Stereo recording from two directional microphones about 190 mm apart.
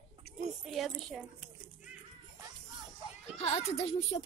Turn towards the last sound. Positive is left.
turn(degrees=35)  # may be behind; listen again after turning